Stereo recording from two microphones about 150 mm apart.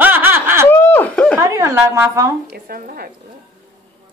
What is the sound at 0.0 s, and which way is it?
Snicker, 10° right (ahead or behind).